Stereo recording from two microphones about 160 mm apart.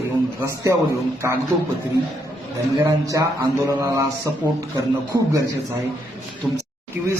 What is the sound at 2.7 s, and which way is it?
A man's voice, 20° right (ahead or behind).